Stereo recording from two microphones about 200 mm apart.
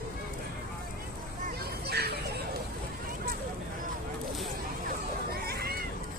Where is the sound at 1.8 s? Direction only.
55° right (ahead or behind).